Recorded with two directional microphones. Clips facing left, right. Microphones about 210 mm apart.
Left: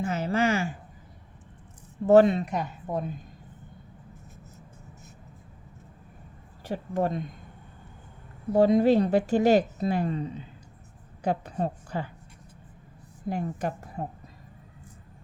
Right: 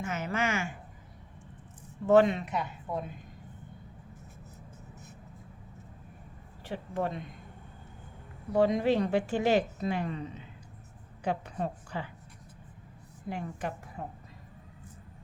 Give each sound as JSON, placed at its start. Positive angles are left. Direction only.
{"t": 0.0, "sound": "a woman's voice", "side_deg": 35}
{"t": 2.0, "sound": "a woman's voice", "side_deg": 35}
{"t": 6.7, "sound": "a woman's voice", "side_deg": 40}
{"t": 8.5, "sound": "a woman's voice", "side_deg": 40}
{"t": 13.2, "sound": "a woman's voice", "side_deg": 40}